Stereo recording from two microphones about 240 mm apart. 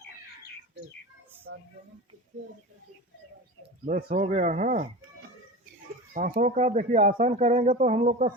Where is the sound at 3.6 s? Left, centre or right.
Right.